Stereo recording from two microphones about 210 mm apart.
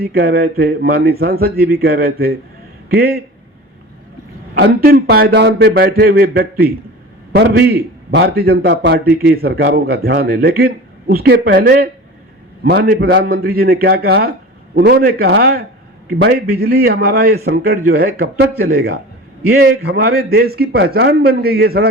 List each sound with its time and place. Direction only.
0.0 s a man's voice: 45° right (ahead or behind)
4.5 s a man's voice: 45° right (ahead or behind)